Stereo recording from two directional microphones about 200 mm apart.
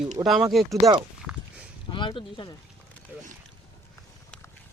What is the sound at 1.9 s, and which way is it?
Speech, 25° left (ahead or behind).